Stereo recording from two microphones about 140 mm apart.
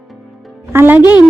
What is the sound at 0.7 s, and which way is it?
Speech, 15° right (ahead or behind).